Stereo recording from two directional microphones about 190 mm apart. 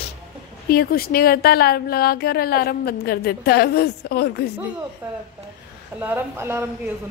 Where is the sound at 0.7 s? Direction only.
50° left (ahead or behind).